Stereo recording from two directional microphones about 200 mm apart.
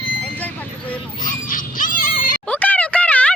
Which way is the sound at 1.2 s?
40° left (ahead or behind).